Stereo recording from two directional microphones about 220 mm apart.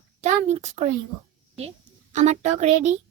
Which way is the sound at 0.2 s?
30° right (ahead or behind).